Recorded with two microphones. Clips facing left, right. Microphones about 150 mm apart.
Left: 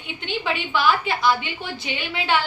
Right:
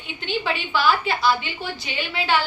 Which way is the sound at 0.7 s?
20° left (ahead or behind).